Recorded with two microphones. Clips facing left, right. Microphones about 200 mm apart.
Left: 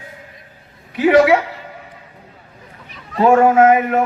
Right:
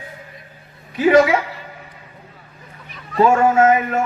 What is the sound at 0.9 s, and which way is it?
Speech, 65° left (ahead or behind).